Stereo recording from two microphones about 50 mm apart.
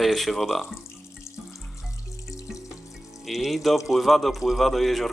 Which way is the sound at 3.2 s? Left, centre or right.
Centre.